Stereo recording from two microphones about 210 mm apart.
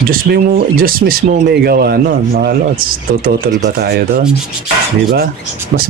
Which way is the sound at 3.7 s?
50° right (ahead or behind).